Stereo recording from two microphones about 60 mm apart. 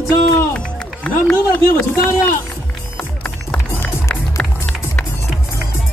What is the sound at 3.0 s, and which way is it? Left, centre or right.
Music, left.